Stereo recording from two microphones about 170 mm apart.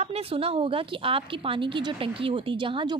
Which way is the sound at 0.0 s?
35° right (ahead or behind).